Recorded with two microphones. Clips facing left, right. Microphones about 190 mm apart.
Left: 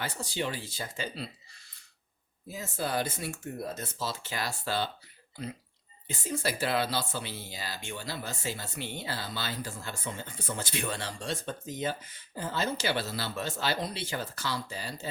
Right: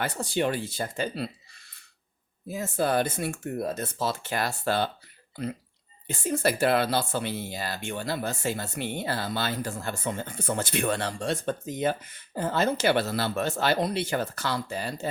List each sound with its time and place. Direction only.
0.0 s speech: 60° right (ahead or behind)
2.5 s speech: 55° right (ahead or behind)
6.1 s speech: 55° right (ahead or behind)